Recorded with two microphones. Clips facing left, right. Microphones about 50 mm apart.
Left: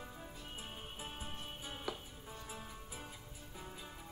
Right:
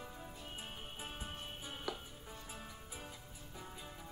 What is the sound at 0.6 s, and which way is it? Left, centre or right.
Music, right.